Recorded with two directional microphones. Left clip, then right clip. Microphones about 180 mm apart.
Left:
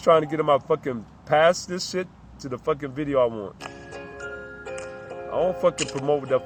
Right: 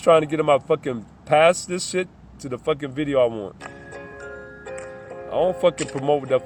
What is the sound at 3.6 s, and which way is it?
Music, 5° left (ahead or behind).